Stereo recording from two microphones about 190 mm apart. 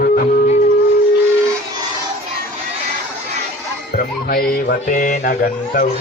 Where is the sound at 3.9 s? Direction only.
55° left (ahead or behind).